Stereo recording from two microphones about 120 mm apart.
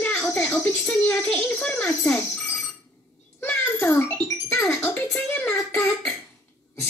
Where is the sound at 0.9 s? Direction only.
20° left (ahead or behind).